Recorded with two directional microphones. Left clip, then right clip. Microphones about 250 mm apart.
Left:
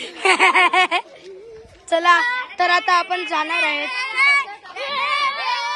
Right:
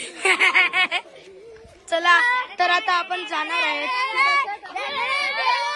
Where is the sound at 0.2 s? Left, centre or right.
Centre.